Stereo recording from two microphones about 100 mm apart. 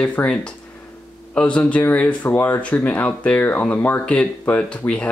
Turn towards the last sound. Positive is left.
turn(degrees=10)  # may be behind; listen again after turning